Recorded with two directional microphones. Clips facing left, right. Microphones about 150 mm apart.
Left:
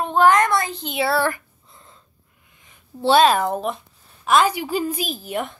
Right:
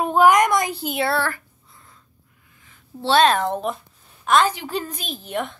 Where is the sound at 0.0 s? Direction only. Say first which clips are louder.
Right 1 dB; 10° right (ahead or behind).